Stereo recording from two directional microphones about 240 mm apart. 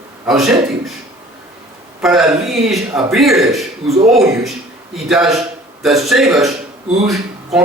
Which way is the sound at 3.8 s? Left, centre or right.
Right.